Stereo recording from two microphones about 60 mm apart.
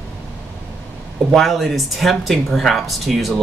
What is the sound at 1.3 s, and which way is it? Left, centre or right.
Speech, centre.